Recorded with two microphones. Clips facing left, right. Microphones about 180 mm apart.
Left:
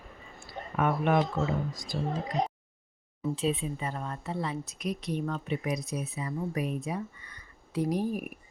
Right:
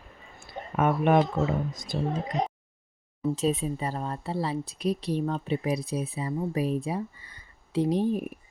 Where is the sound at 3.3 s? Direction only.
40° right (ahead or behind).